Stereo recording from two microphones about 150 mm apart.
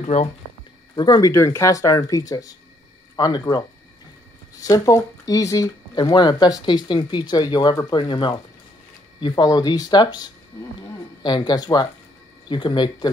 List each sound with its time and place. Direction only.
0.0 s speech: 50° left (ahead or behind)
0.9 s speech: 25° left (ahead or behind)